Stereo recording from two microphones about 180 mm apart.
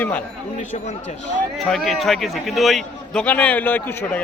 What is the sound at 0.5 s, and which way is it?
Speech, 40° left (ahead or behind).